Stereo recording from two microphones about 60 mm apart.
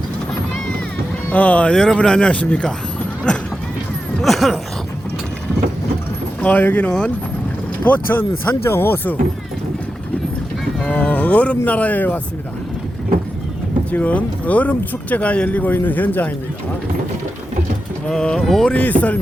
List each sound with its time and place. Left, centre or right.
1.3 s speech: left
4.2 s a sound: centre
6.4 s speech: left
8.6 s speech: left
10.9 s speech: left
13.9 s speech: left
18.1 s speech: centre
18.7 s speech: left